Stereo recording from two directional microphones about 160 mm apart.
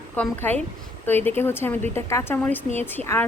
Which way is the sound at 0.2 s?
10° left (ahead or behind).